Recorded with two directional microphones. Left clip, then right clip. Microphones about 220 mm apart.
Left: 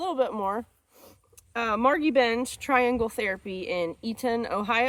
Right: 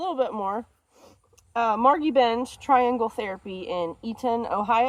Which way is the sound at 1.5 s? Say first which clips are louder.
Right 4 dB; 25° left (ahead or behind).